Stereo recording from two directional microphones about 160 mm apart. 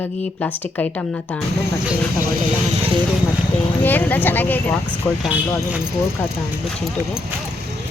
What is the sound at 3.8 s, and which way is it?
Speech, 10° left (ahead or behind).